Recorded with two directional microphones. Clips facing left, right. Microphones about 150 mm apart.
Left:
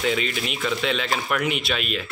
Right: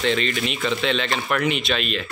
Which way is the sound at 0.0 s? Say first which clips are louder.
Right 2 dB; 5° left (ahead or behind).